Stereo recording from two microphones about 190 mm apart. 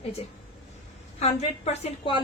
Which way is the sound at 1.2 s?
35° left (ahead or behind).